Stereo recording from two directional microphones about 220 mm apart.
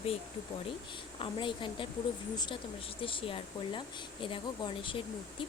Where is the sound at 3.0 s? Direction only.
25° left (ahead or behind).